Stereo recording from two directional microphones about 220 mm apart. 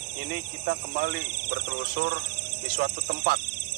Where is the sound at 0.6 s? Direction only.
50° right (ahead or behind).